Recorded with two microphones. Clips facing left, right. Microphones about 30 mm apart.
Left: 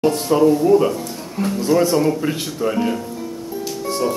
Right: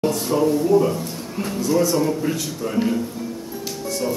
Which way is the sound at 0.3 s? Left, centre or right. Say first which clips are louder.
Left 5 dB; left.